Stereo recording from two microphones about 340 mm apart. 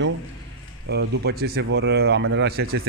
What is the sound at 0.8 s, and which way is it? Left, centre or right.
Speech, right.